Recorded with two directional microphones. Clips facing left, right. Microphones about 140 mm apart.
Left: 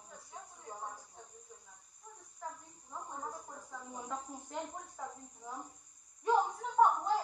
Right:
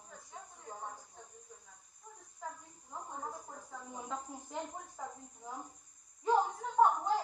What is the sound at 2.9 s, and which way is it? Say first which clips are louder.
Cricket: even; 5° right (ahead or behind).